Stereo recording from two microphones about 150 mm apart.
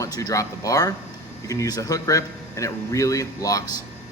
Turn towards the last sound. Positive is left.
turn(degrees=20)  # may be behind; listen again after turning